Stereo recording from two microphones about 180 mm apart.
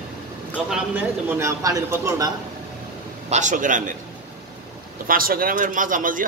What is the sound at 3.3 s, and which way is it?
Speech, 45° right (ahead or behind).